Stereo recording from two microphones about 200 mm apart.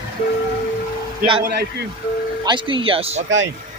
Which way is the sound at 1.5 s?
55° right (ahead or behind).